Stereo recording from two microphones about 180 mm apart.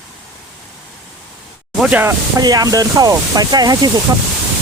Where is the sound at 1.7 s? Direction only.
5° right (ahead or behind).